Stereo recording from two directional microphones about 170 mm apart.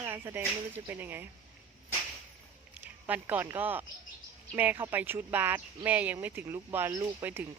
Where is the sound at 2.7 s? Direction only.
10° right (ahead or behind).